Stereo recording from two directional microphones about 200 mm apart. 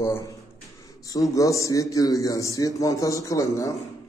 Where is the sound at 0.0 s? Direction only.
15° left (ahead or behind).